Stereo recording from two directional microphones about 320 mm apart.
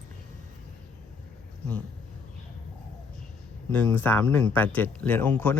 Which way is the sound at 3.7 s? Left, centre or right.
Centre.